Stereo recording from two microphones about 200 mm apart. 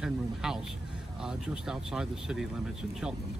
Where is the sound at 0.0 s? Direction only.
5° right (ahead or behind).